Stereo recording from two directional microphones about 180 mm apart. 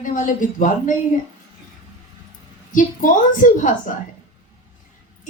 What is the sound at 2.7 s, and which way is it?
A woman's voice, 45° left (ahead or behind).